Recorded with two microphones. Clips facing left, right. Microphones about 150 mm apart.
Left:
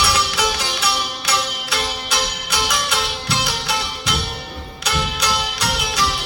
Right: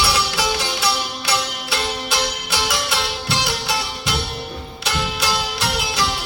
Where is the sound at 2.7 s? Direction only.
25° right (ahead or behind).